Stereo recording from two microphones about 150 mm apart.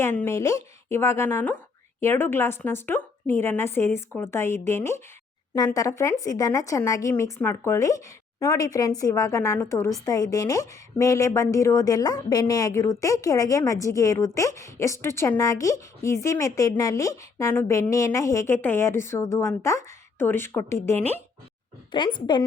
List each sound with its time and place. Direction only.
0.0 s a woman's voice: 15° left (ahead or behind)
21.9 s a woman's voice: 30° left (ahead or behind)